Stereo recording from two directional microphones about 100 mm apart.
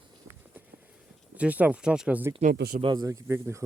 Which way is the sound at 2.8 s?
45° right (ahead or behind).